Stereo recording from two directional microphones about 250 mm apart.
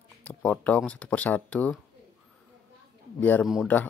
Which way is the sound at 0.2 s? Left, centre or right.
Centre.